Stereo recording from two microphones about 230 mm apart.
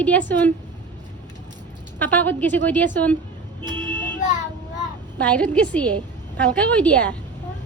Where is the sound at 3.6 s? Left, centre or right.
Centre.